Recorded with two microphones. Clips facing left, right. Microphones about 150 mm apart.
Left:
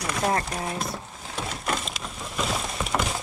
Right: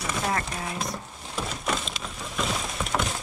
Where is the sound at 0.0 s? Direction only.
Centre (ahead or behind).